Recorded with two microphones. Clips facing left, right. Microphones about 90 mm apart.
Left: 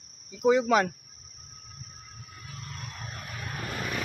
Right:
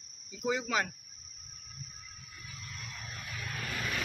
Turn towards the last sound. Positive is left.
turn(degrees=25)  # may be behind; listen again after turning